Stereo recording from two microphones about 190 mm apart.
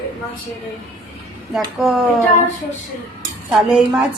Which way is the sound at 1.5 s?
Centre (ahead or behind).